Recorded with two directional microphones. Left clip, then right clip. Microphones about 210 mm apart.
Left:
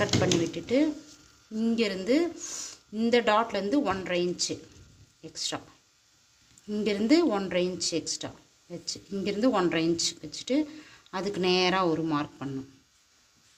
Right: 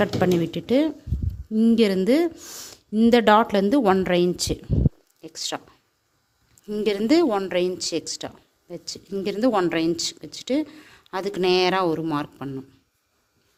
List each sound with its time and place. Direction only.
0.0 s speech: 55° right (ahead or behind)
6.7 s speech: 55° right (ahead or behind)